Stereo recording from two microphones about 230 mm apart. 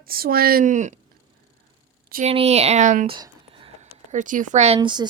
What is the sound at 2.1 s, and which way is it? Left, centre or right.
Speech, right.